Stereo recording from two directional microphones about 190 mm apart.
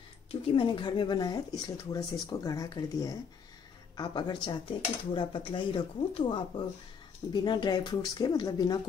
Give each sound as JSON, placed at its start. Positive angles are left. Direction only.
{"t": 0.3, "sound": "speech", "side_deg": 25}